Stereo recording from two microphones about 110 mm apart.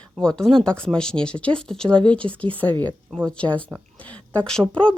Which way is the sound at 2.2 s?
55° right (ahead or behind).